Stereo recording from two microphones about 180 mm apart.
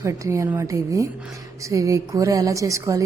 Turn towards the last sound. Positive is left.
turn(degrees=-15)  # may be behind; listen again after turning